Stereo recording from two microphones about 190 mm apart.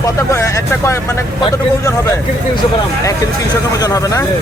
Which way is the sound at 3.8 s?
20° left (ahead or behind).